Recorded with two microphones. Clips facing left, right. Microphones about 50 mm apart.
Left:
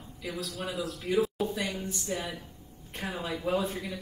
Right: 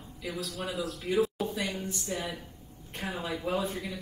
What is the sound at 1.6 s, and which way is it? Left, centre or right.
Speech, right.